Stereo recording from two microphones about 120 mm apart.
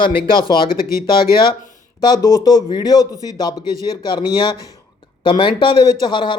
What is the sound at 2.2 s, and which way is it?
Speech, 25° left (ahead or behind).